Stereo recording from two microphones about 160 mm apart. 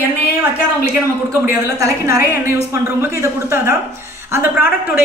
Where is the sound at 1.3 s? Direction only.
20° right (ahead or behind).